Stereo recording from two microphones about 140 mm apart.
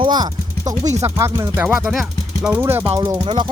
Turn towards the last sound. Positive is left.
turn(degrees=-25)  # may be behind; listen again after turning